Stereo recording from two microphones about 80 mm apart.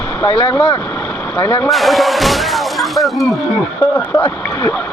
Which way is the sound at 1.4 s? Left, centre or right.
Left.